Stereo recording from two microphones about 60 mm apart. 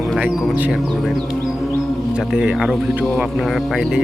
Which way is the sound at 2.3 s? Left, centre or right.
Centre.